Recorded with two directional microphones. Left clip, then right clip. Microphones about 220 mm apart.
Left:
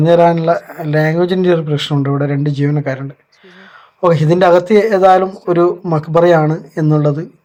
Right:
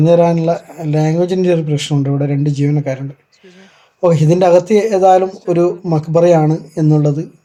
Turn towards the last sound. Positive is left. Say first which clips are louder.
# even
turn(degrees=-5)  # may be behind; listen again after turning